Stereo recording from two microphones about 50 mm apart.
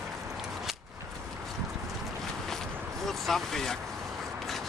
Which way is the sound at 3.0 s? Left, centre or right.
Centre.